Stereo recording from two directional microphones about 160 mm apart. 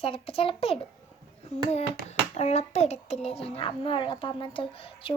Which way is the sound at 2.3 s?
45° left (ahead or behind).